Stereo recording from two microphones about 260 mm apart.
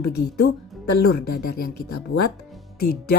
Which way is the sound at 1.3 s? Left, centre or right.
Left.